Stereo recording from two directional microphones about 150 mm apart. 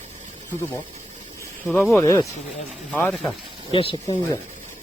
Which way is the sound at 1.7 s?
5° left (ahead or behind).